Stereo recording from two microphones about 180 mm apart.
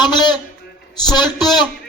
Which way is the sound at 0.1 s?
25° left (ahead or behind).